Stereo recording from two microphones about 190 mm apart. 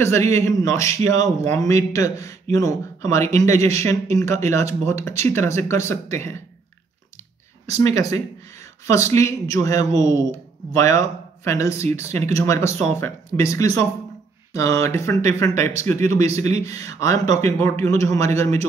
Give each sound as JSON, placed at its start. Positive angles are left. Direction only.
{"t": 0.3, "sound": "speech", "side_deg": 15}
{"t": 7.7, "sound": "speech", "side_deg": 15}